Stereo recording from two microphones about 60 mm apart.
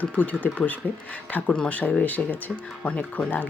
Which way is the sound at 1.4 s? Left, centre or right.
Centre.